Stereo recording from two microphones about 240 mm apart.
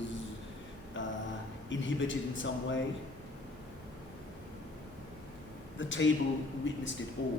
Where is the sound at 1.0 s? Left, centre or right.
Left.